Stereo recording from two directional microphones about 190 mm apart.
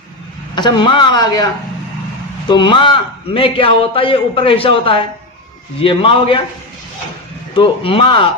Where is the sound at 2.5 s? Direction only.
25° left (ahead or behind).